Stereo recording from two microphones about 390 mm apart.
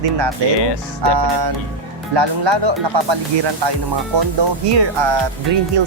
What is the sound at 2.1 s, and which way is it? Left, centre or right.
Speech, right.